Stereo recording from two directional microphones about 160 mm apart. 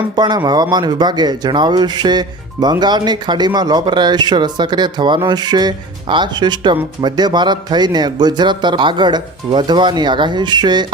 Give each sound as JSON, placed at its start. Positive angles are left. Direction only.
{"t": 0.2, "sound": "speech", "side_deg": -25}